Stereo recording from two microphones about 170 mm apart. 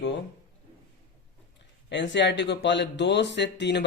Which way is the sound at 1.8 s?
90° left.